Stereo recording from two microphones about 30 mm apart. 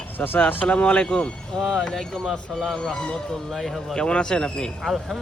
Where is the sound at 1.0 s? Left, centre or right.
Left.